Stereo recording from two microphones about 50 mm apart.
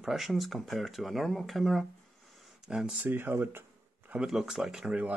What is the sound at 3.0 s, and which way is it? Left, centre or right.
Speech, right.